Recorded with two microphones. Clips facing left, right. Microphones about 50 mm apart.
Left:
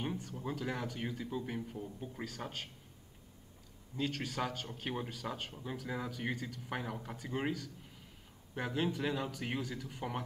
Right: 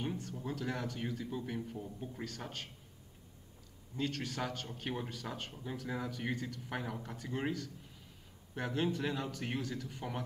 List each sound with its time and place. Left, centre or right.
0.1 s a sound: centre
0.4 s a man's voice: centre
3.9 s a man's voice: centre